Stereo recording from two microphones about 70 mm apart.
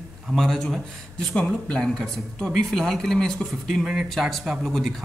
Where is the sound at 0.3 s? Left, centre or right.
Centre.